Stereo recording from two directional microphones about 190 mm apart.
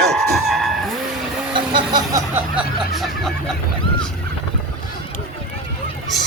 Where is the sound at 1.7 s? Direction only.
20° right (ahead or behind).